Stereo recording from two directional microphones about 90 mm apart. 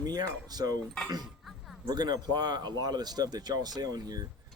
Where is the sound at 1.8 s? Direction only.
50° right (ahead or behind).